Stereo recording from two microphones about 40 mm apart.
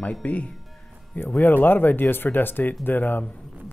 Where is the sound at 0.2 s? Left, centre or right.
Left.